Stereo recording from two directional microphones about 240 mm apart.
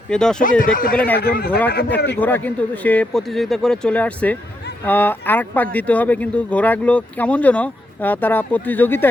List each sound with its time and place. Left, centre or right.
0.1 s speech: centre
0.6 s speech: left
0.9 s speech: centre
1.2 s speech: left
2.1 s speech: centre